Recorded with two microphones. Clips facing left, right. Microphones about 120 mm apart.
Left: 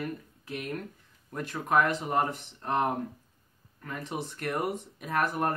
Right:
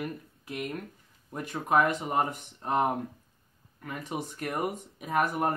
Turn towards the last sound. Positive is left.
turn(degrees=-10)  # may be behind; listen again after turning